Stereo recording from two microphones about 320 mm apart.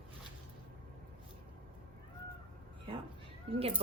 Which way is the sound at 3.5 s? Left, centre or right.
Centre.